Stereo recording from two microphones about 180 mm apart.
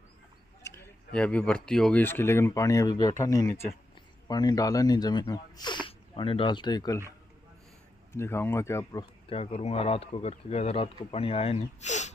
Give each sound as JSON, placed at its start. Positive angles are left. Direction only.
{"t": 0.7, "sound": "speech", "side_deg": 10}
{"t": 8.1, "sound": "speech", "side_deg": 15}
{"t": 9.3, "sound": "speech", "side_deg": 35}